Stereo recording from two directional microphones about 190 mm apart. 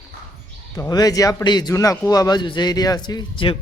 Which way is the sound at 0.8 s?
20° left (ahead or behind).